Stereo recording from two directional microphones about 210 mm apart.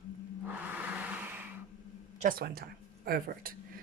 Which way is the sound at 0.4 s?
5° right (ahead or behind).